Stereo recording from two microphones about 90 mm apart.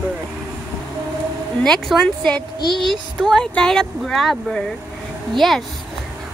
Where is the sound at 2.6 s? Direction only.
60° left (ahead or behind).